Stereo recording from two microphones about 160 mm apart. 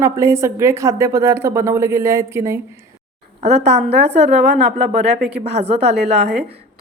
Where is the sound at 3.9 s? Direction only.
90° right.